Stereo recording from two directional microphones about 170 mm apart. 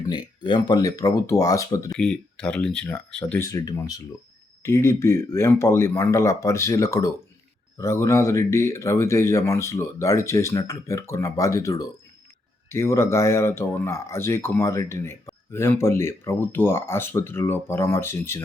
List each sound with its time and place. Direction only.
0.4 s speech: 25° left (ahead or behind)
1.9 s speech: 5° left (ahead or behind)
3.4 s speech: 20° left (ahead or behind)